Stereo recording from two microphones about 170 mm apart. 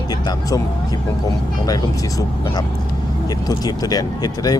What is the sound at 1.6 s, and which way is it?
Speech, 20° left (ahead or behind).